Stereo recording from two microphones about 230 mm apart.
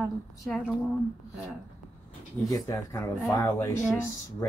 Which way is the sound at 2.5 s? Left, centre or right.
Centre.